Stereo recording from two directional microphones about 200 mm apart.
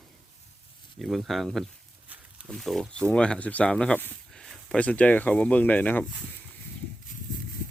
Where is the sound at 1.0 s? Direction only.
Centre (ahead or behind).